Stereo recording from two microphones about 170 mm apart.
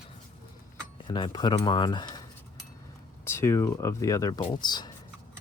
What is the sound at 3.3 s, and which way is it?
Speech, 15° left (ahead or behind).